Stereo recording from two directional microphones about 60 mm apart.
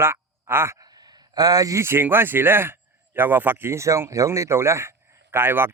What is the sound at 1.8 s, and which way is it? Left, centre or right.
Speech, right.